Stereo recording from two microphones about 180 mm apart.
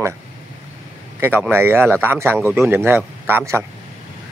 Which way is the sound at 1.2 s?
10° right (ahead or behind).